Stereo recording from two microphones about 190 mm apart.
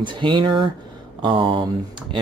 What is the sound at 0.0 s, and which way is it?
Speech, 25° right (ahead or behind).